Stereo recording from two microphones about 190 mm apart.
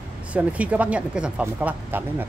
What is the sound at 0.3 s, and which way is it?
Speech, 5° right (ahead or behind).